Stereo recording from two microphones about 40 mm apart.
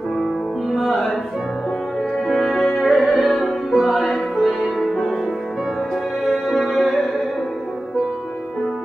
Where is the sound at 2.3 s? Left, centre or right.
Centre.